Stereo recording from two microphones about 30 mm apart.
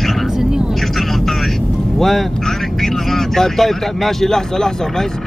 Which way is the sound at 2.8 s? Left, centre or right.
Centre.